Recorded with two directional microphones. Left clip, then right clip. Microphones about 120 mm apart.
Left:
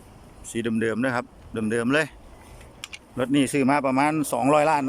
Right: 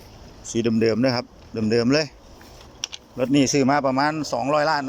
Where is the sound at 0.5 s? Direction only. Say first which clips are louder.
Right 5 dB; 5° left (ahead or behind).